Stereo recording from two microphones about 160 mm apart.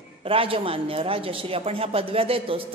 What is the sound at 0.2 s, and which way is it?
Speech, 35° right (ahead or behind).